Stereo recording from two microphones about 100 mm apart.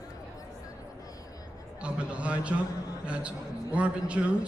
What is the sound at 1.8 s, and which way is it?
A man's voice, 10° right (ahead or behind).